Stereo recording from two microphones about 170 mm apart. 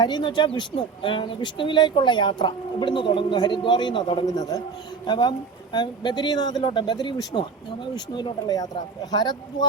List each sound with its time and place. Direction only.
0.0 s speech: 25° left (ahead or behind)